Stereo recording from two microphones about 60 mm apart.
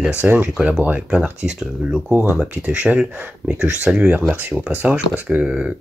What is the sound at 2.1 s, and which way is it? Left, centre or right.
Speech, right.